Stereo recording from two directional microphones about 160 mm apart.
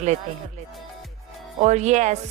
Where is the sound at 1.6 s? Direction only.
45° right (ahead or behind).